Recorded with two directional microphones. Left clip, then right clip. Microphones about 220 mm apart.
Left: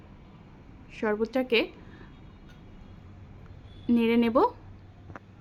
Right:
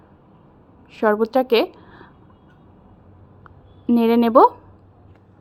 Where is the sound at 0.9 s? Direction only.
15° right (ahead or behind).